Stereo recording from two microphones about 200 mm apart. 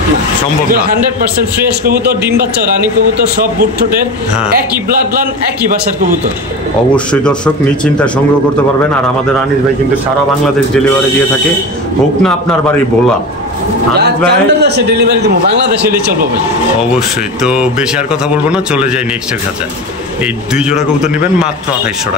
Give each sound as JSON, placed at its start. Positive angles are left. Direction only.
{"t": 5.7, "sound": "a man's voice", "side_deg": -45}
{"t": 7.1, "sound": "speech", "side_deg": 5}
{"t": 12.2, "sound": "speech", "side_deg": 5}
{"t": 13.9, "sound": "a man's voice", "side_deg": -55}
{"t": 16.9, "sound": "speech", "side_deg": -5}
{"t": 20.5, "sound": "speech", "side_deg": -5}